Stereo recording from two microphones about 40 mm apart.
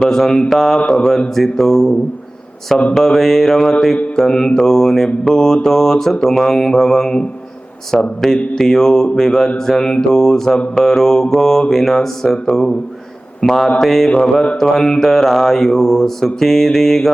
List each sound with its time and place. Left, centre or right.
0.0 s mantra: centre
0.8 s mantra: left
1.4 s mantra: centre
7.9 s speech: centre
8.5 s mantra: centre
13.4 s speech: centre
13.8 s mantra: centre